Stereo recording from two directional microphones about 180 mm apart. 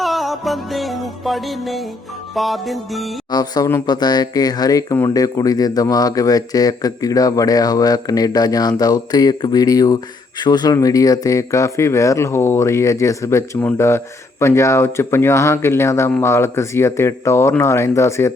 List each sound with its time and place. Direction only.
0.0 s music: centre (ahead or behind)
3.3 s speech: 20° left (ahead or behind)